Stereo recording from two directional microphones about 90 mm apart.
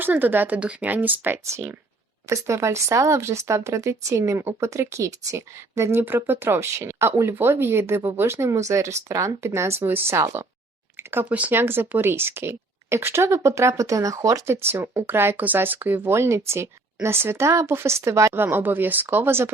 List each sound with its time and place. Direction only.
0.0 s speech: 20° right (ahead or behind)
18.4 s speech: 20° right (ahead or behind)